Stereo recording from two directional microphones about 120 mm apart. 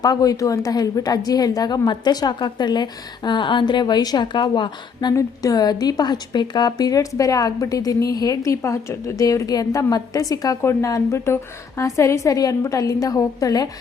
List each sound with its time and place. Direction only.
0.0 s a woman's voice: 30° left (ahead or behind)